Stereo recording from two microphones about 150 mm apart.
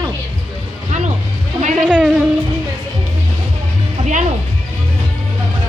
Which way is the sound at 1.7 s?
5° right (ahead or behind).